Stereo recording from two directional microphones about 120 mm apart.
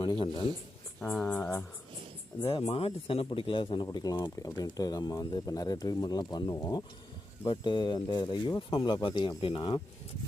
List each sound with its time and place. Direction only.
0.0 s speech: 40° left (ahead or behind)
1.1 s speech: 10° left (ahead or behind)
2.5 s a man's voice: 50° left (ahead or behind)
3.9 s a man's voice: 30° left (ahead or behind)